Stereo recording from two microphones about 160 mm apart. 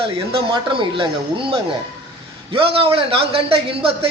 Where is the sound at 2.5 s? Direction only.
35° right (ahead or behind).